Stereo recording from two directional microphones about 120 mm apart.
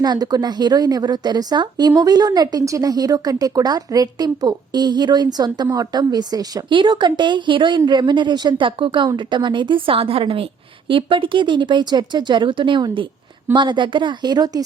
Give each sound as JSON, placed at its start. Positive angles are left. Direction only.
{"t": 0.0, "sound": "a woman's voice", "side_deg": -35}